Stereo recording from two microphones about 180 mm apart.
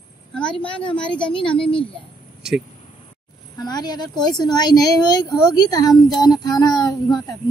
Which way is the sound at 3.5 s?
20° left (ahead or behind).